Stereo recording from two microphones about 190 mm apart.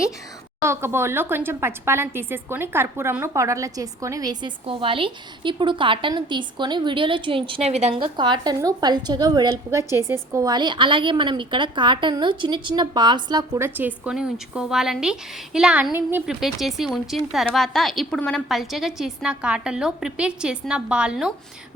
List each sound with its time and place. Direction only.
0.6 s a woman's voice: 15° right (ahead or behind)